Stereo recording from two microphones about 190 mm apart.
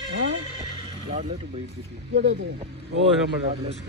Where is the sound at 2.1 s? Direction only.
65° right (ahead or behind).